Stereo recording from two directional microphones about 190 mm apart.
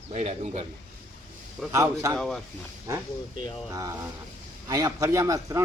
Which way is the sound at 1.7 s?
15° right (ahead or behind).